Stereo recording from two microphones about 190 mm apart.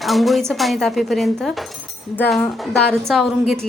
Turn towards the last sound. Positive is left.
turn(degrees=0)  # may be behind; listen again after turning